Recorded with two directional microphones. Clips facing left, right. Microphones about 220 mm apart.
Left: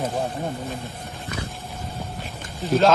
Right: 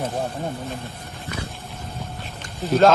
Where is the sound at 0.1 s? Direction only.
Centre (ahead or behind).